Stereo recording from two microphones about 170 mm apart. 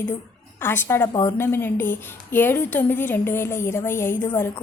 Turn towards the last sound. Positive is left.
turn(degrees=15)  # may be behind; listen again after turning